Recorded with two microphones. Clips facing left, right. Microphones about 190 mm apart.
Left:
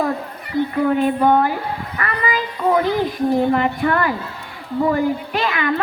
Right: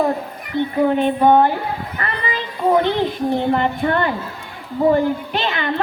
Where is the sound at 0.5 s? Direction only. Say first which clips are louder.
Even; 25° right (ahead or behind).